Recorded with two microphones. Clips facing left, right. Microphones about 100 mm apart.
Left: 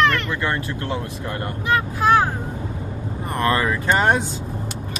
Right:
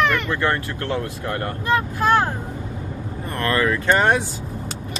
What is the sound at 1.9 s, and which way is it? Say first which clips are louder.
Speech: left 3 dB; 5° left (ahead or behind).